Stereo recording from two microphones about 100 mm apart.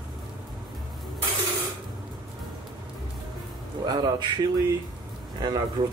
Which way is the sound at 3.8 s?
45° right (ahead or behind).